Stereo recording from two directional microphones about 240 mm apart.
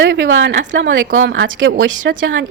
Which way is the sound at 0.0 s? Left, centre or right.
Right.